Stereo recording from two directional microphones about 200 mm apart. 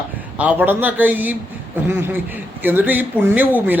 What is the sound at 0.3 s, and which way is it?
Speech, 10° right (ahead or behind).